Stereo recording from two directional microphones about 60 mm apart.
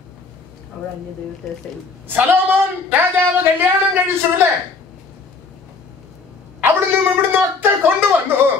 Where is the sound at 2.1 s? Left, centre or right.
Right.